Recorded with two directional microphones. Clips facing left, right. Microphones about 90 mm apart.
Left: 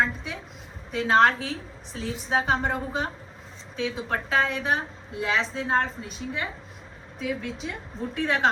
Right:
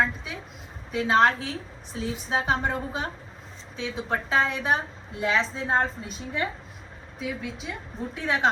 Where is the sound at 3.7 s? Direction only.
20° right (ahead or behind).